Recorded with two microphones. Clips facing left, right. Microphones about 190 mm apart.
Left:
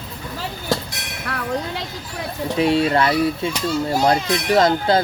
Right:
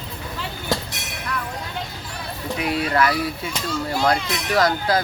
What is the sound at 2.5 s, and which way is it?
Speech, 25° left (ahead or behind).